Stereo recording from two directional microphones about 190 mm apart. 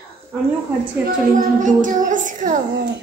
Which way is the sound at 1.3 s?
45° right (ahead or behind).